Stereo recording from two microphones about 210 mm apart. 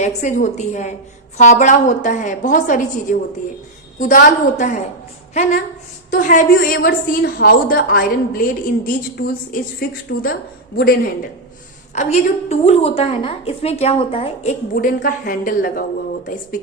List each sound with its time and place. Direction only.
0.0 s a woman's voice: 35° left (ahead or behind)
10.1 s a woman's voice: 45° left (ahead or behind)
11.9 s a woman's voice: 35° left (ahead or behind)
14.9 s a woman's voice: 45° left (ahead or behind)